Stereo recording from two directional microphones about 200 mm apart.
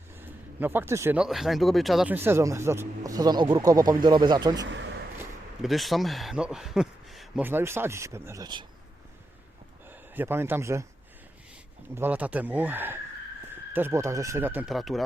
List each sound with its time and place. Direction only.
0.2 s speech: 10° right (ahead or behind)
4.6 s speech: 65° right (ahead or behind)
5.6 s a man's voice: centre (ahead or behind); by 8.6 s 20° right (ahead or behind)
9.9 s speech: 10° right (ahead or behind)
11.9 s speech: 10° right (ahead or behind)